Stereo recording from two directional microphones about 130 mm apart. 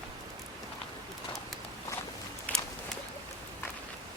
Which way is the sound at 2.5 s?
10° left (ahead or behind).